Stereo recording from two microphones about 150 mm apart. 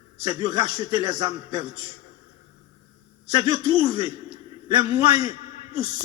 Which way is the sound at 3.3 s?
30° right (ahead or behind).